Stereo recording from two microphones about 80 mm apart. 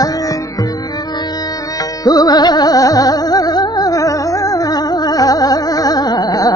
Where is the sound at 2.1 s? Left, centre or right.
Left.